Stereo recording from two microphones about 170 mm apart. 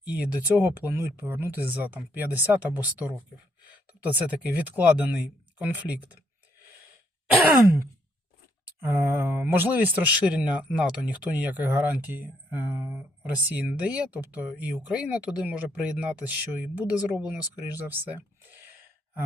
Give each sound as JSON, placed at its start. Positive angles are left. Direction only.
{"t": 0.0, "sound": "speech", "side_deg": -10}
{"t": 8.8, "sound": "speech", "side_deg": -15}
{"t": 17.7, "sound": "a sound", "side_deg": -10}